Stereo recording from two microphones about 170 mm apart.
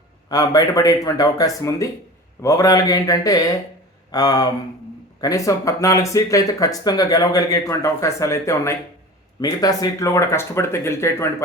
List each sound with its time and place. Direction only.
0.3 s speech: 20° left (ahead or behind)